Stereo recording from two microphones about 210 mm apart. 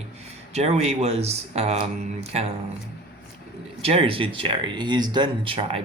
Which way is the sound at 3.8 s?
30° right (ahead or behind).